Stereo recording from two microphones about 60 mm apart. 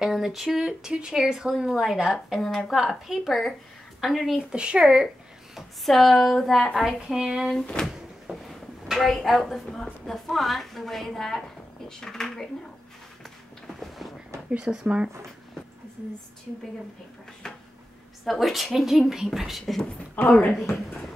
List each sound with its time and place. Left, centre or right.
0.0 s speech: centre
4.5 s speech: centre
5.0 s speech: centre
7.8 s speech: centre
8.5 s a woman's voice: centre
13.7 s a sound: centre
14.6 s speech: centre
18.2 s speech: centre
20.2 s speech: left
20.5 s speech: centre